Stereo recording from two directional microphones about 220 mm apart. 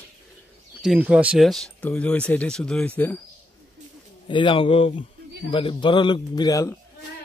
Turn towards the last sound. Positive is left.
turn(degrees=15)  # may be behind; listen again after turning